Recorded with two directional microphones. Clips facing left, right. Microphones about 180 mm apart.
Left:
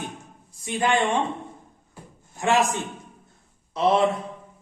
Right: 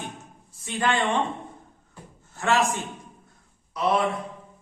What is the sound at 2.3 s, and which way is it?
A man's voice, 15° left (ahead or behind).